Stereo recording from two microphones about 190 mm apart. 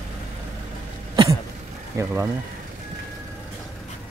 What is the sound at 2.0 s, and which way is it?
Speech, 15° right (ahead or behind).